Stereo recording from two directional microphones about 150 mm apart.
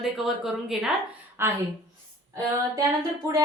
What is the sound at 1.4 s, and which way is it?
Speech, 15° right (ahead or behind).